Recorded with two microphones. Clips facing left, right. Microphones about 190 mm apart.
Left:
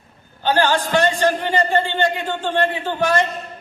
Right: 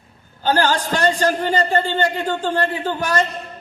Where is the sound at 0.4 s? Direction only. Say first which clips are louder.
Even; 40° right (ahead or behind).